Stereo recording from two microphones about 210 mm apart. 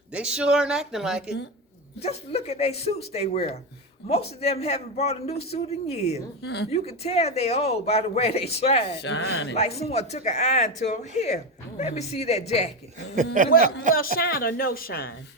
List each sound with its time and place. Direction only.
0.1 s speech: 5° right (ahead or behind)
2.0 s speech: 30° left (ahead or behind)
6.4 s a woman's voice: 50° left (ahead or behind)
6.7 s speech: 30° left (ahead or behind)
9.0 s speech: 65° left (ahead or behind)
9.6 s speech: 30° left (ahead or behind)
13.1 s speech: 40° right (ahead or behind)
14.2 s a woman's voice: 45° left (ahead or behind)